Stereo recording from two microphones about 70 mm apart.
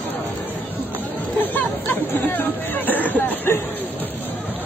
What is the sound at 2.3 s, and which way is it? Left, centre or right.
Hubbub, left.